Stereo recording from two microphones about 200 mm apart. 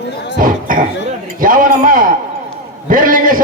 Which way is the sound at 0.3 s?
45° right (ahead or behind).